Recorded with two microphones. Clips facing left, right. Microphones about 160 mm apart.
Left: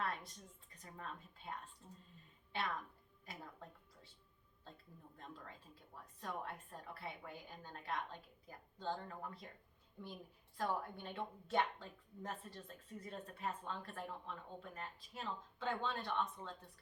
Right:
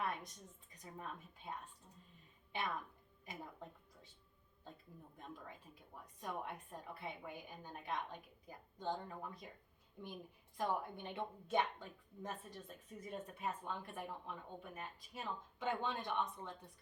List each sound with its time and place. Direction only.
0.0 s a sound: 15° right (ahead or behind)
0.8 s a woman's voice: 15° right (ahead or behind)
5.1 s speech: 15° right (ahead or behind)
10.6 s speech: 15° right (ahead or behind)